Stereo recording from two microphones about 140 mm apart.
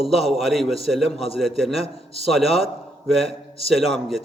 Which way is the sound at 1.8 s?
45° left (ahead or behind).